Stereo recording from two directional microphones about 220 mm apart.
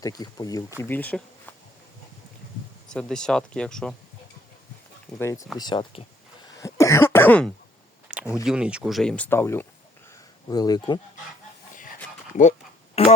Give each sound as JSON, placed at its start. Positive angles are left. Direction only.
{"t": 0.0, "sound": "speech", "side_deg": 15}
{"t": 2.9, "sound": "speech", "side_deg": 5}
{"t": 5.2, "sound": "speech", "side_deg": 15}
{"t": 6.6, "sound": "cough", "side_deg": 15}
{"t": 8.0, "sound": "a sound", "side_deg": -5}
{"t": 8.4, "sound": "speech", "side_deg": -5}
{"t": 13.0, "sound": "a sound", "side_deg": 25}